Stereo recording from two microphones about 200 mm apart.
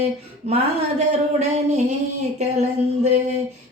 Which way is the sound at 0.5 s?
30° right (ahead or behind).